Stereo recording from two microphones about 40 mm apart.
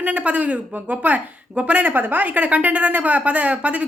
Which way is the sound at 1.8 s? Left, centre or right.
Right.